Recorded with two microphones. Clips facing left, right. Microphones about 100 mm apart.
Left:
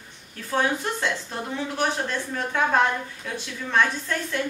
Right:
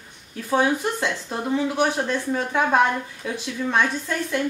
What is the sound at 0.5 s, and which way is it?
A woman's voice, 10° right (ahead or behind).